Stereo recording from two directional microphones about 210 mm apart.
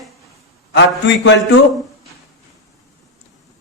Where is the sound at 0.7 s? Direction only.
60° left (ahead or behind).